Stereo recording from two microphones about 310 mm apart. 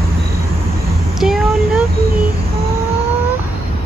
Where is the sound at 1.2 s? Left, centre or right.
Centre.